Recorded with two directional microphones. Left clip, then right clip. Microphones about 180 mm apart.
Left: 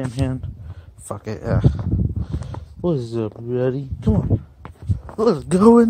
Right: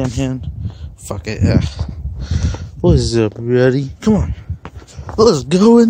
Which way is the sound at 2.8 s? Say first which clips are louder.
Right 8 dB; 25° right (ahead or behind).